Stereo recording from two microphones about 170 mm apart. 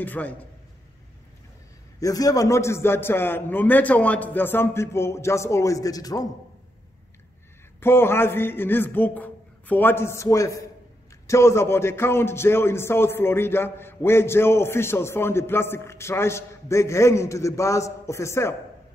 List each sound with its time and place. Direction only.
0.0 s a man's voice: 10° left (ahead or behind)
2.0 s a man's voice: 20° left (ahead or behind)
7.8 s a man's voice: 15° left (ahead or behind)